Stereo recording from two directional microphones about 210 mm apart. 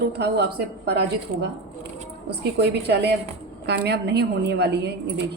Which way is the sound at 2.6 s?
55° right (ahead or behind).